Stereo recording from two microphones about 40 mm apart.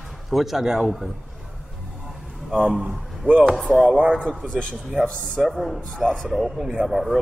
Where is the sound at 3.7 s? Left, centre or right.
Centre.